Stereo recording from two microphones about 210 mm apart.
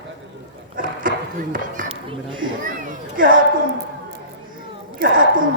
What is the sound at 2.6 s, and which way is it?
Speech, 40° right (ahead or behind).